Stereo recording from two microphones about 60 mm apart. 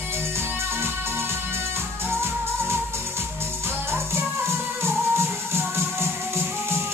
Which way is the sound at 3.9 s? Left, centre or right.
Right.